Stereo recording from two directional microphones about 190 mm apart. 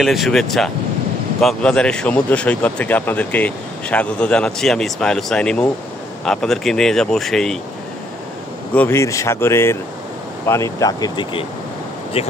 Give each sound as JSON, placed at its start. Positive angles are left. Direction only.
{"t": 0.0, "sound": "speech", "side_deg": 0}
{"t": 8.7, "sound": "speech", "side_deg": 15}